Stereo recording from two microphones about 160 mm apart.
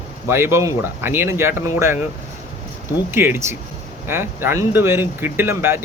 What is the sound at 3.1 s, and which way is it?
Speech, 15° right (ahead or behind).